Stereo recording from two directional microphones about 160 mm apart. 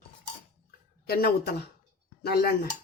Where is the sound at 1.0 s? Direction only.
75° left (ahead or behind).